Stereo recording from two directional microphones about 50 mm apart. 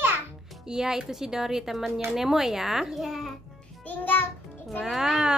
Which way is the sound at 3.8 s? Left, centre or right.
Left.